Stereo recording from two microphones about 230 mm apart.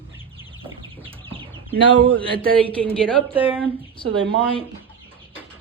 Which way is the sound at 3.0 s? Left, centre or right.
Centre.